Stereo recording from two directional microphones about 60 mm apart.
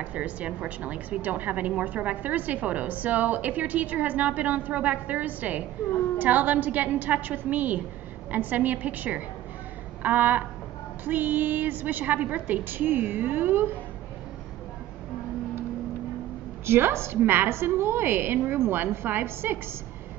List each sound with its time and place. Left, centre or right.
0.0 s a woman's voice: right
16.6 s a woman's voice: right